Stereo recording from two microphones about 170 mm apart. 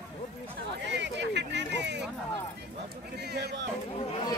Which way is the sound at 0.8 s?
90° right.